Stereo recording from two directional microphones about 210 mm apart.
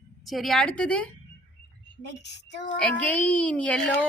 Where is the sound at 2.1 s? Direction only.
55° left (ahead or behind).